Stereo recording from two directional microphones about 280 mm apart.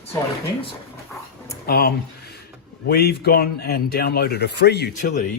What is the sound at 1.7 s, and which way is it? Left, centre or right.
A man's voice, left.